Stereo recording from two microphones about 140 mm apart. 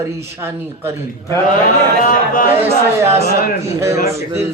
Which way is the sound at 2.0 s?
75° left (ahead or behind).